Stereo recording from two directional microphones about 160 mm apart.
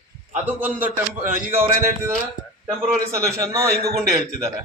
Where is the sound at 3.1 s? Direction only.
20° right (ahead or behind).